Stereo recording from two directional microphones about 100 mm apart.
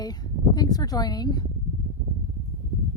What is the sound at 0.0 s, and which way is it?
Speech, 40° left (ahead or behind).